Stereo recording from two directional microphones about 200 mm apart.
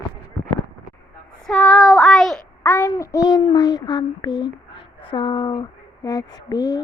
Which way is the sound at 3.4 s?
20° left (ahead or behind).